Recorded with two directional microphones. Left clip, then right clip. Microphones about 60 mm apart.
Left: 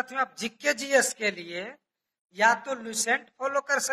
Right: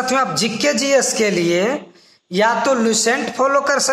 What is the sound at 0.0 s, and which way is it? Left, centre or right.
Speech, right.